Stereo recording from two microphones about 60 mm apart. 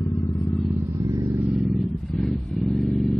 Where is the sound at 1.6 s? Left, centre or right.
Centre.